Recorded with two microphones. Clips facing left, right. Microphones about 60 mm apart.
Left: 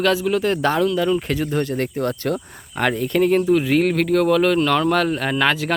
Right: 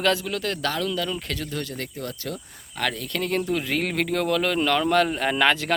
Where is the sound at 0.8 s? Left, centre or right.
Centre; by 1.8 s left.